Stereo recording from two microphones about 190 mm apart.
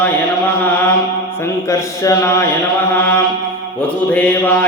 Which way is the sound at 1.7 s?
15° left (ahead or behind).